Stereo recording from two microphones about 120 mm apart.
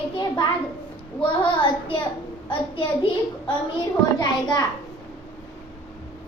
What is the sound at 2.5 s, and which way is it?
Speech, 45° left (ahead or behind).